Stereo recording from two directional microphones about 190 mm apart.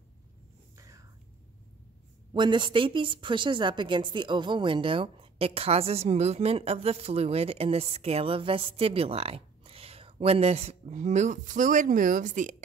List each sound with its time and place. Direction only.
0.7 s whispering: 15° right (ahead or behind)
2.3 s a woman's voice: 25° right (ahead or behind); by 12.6 s 40° right (ahead or behind)